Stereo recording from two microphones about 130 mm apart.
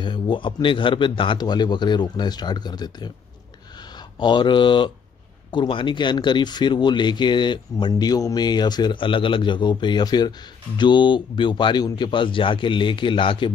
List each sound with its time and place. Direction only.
0.0 s speech: 40° left (ahead or behind)
4.2 s speech: 35° left (ahead or behind)